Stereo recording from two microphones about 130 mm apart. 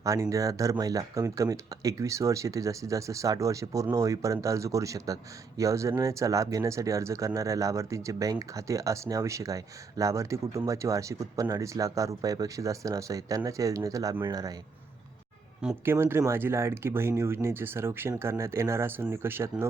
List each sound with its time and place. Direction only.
0.0 s speech: 25° right (ahead or behind)
15.8 s speech: 15° right (ahead or behind)